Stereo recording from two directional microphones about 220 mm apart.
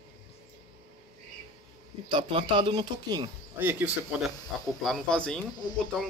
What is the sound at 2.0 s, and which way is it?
Speech, 20° right (ahead or behind).